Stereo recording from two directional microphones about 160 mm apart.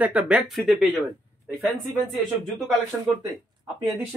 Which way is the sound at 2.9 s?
Centre (ahead or behind).